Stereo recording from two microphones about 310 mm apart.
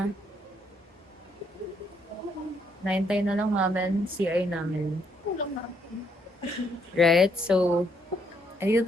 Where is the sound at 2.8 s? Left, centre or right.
Centre.